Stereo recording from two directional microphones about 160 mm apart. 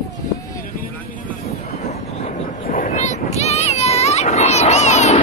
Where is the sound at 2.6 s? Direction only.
55° left (ahead or behind).